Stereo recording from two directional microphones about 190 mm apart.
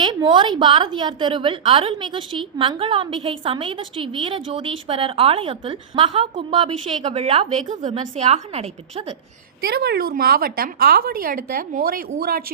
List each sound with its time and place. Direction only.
0.0 s a woman's voice: 25° right (ahead or behind)
9.6 s a woman's voice: 55° right (ahead or behind)